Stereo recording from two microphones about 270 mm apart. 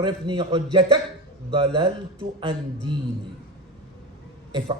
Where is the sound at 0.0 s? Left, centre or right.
Centre.